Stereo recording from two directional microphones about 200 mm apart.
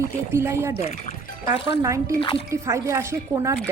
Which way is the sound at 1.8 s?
15° right (ahead or behind).